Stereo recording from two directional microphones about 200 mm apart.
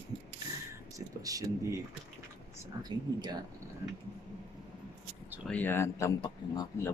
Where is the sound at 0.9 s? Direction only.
15° right (ahead or behind).